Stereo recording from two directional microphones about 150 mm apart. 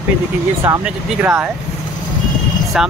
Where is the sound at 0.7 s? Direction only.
20° right (ahead or behind).